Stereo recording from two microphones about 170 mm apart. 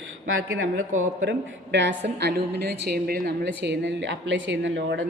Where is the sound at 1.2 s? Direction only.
90° right.